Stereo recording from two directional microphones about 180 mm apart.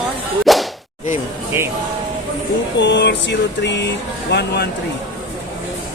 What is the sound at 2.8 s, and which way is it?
Music, 75° left (ahead or behind).